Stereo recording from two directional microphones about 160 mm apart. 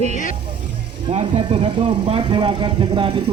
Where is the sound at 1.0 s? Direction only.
35° right (ahead or behind).